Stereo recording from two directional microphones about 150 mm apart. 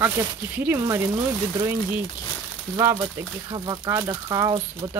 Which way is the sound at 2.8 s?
20° right (ahead or behind).